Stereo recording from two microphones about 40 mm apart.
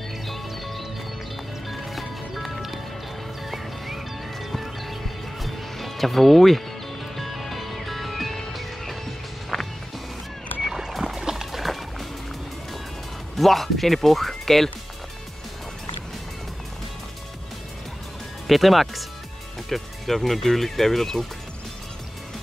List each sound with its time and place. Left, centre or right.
0.3 s music: centre
9.5 s music: centre
10.6 s music: centre
10.9 s music: centre
11.1 s music: centre
11.5 s music: centre
13.4 s speech: centre
18.5 s speech: centre